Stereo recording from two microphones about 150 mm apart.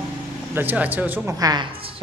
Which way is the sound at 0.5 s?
10° right (ahead or behind).